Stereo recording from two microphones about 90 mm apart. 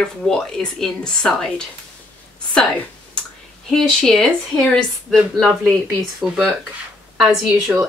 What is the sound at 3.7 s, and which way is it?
Speech, 5° left (ahead or behind).